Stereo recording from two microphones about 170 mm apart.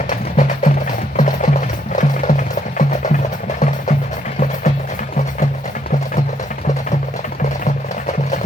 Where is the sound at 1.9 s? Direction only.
50° left (ahead or behind).